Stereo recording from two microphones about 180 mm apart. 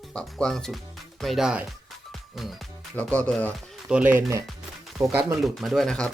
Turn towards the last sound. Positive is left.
turn(degrees=5)  # may be behind; listen again after turning